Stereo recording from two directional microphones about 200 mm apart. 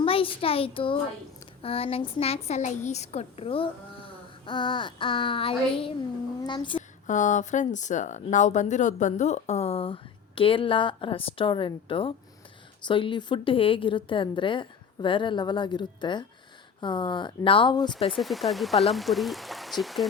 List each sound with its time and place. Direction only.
0.0 s a child's voice: 25° left (ahead or behind)
7.1 s a woman's voice: 40° left (ahead or behind); by 17.9 s 20° left (ahead or behind)
18.1 s speech: centre (ahead or behind)